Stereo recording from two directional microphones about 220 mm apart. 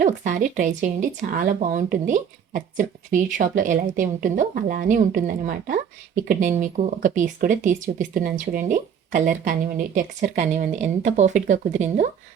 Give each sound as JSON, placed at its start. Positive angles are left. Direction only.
{"t": 0.0, "sound": "speech", "side_deg": -35}